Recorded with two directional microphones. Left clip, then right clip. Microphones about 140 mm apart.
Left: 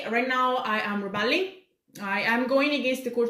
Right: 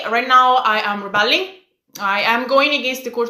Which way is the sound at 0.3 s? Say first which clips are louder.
Right 16 dB; 25° left (ahead or behind).